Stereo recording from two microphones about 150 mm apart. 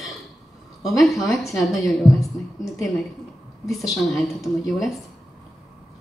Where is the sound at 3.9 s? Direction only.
Centre (ahead or behind).